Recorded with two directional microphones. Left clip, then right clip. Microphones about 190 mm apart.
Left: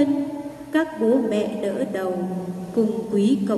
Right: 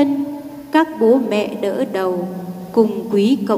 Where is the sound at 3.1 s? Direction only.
50° right (ahead or behind).